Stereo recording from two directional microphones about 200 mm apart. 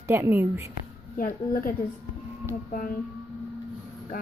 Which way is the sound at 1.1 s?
45° left (ahead or behind).